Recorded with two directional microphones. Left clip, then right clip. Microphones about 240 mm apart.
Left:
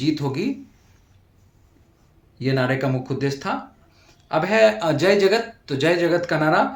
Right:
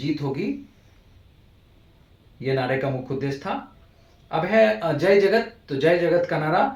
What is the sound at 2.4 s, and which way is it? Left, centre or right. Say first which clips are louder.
A man's voice: left 2 dB; left.